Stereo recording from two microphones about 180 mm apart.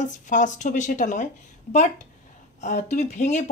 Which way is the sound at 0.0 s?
45° left (ahead or behind).